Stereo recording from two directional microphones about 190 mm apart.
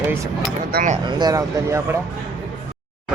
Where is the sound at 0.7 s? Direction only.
50° right (ahead or behind).